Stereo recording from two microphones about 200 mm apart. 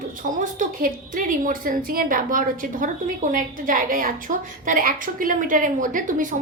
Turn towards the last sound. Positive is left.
turn(degrees=-40)  # may be behind; listen again after turning